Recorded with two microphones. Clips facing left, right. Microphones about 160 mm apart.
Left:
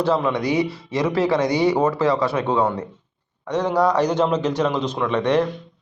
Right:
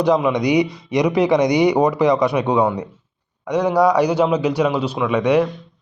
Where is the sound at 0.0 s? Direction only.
15° right (ahead or behind).